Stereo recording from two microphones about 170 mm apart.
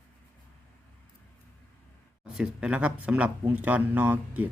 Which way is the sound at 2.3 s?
5° right (ahead or behind).